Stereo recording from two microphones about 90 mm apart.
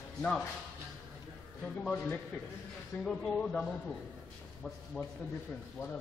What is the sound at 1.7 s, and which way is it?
Speech, 20° left (ahead or behind).